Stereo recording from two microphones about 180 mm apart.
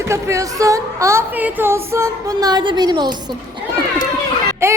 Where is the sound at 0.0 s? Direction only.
15° right (ahead or behind).